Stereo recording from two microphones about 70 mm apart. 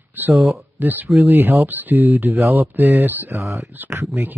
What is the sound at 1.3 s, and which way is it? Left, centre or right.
Speech, right.